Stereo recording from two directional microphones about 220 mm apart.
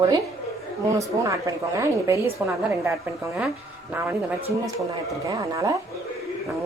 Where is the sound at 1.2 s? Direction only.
15° right (ahead or behind).